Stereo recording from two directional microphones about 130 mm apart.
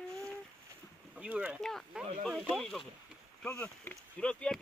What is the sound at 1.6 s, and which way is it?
Speech, centre (ahead or behind).